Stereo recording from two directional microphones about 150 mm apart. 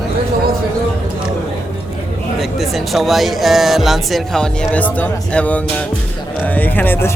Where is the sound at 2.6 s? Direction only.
Centre (ahead or behind).